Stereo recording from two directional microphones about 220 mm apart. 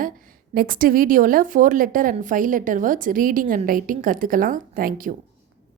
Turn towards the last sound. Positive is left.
turn(degrees=-40)  # may be behind; listen again after turning